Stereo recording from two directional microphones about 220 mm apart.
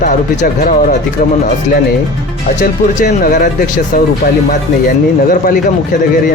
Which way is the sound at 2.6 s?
40° left (ahead or behind).